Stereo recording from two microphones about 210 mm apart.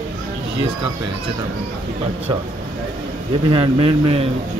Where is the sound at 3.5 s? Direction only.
25° right (ahead or behind).